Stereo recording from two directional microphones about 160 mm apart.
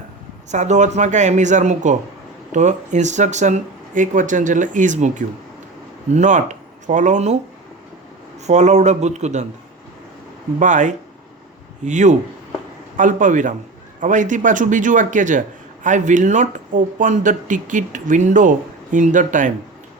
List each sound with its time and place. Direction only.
0.5 s a man's voice: 45° right (ahead or behind)
8.4 s a man's voice: 45° right (ahead or behind)
10.6 s a man's voice: 50° right (ahead or behind)